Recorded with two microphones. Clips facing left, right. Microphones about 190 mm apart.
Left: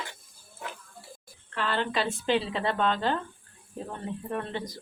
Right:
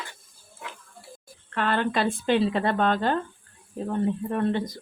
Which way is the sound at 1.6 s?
55° right (ahead or behind).